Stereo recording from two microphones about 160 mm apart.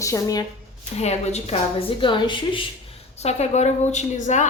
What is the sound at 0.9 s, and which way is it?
A woman's voice, 40° left (ahead or behind).